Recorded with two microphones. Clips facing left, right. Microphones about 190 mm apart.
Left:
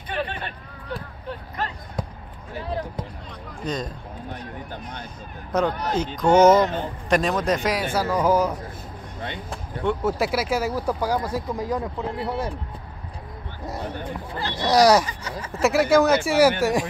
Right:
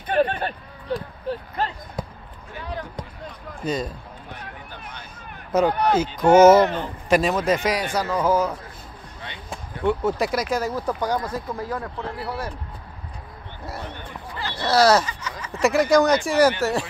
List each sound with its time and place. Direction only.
0.1 s a sound: 45° right (ahead or behind)
1.6 s basketball bounce: 30° right (ahead or behind)
2.5 s basketball bounce: 30° left (ahead or behind)
3.6 s speech: 5° right (ahead or behind)
5.5 s speech: 5° right (ahead or behind); by 12.5 s 20° left (ahead or behind)
14.5 s speech: 15° left (ahead or behind)
15.2 s speech: 35° left (ahead or behind)
15.6 s speech: 5° left (ahead or behind)